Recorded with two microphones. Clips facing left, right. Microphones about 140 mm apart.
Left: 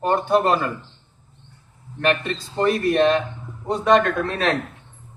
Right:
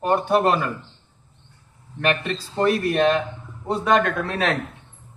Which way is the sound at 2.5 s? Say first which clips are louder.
Left 1 dB; 5° right (ahead or behind).